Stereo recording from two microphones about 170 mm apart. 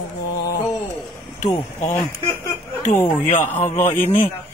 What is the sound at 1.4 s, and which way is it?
Speech, 25° left (ahead or behind).